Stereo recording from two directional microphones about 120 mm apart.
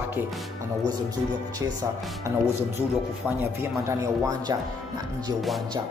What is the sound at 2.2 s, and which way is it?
Speech, 20° right (ahead or behind).